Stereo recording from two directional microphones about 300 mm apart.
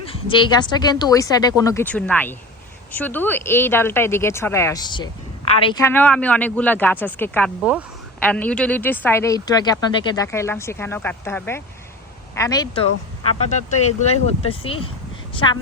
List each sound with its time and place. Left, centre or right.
0.0 s speech: centre
13.5 s a woman's voice: left